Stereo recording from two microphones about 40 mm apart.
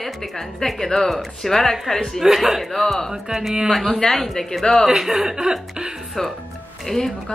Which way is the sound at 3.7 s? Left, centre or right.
Centre.